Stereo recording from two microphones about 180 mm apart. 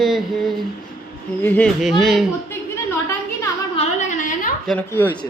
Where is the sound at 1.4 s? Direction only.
10° left (ahead or behind).